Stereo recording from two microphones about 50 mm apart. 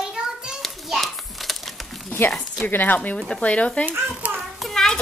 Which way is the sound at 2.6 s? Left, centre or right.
Left.